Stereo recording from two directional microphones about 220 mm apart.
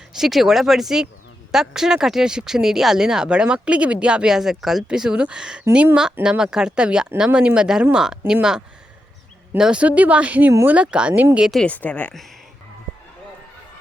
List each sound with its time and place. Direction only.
0.2 s speech: centre (ahead or behind)